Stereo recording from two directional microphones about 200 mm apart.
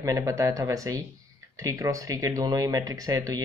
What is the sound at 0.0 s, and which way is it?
Speech, 15° right (ahead or behind).